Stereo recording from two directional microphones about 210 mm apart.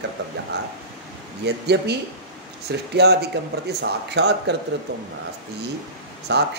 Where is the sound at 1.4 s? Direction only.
55° right (ahead or behind).